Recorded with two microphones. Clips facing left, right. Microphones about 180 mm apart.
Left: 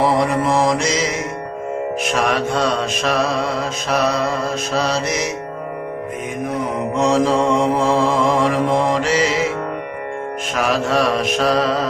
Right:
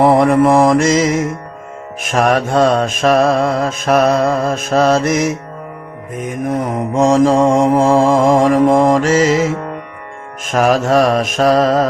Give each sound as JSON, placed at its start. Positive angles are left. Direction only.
{"t": 0.0, "sound": "mantra", "side_deg": -55}